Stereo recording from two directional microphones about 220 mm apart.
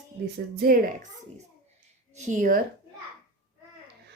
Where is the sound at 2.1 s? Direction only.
35° right (ahead or behind).